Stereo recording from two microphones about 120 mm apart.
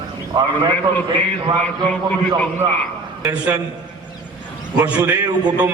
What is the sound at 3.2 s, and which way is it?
Speech, 10° right (ahead or behind).